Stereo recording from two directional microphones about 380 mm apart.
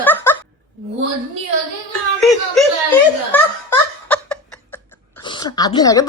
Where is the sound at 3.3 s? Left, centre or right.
Centre.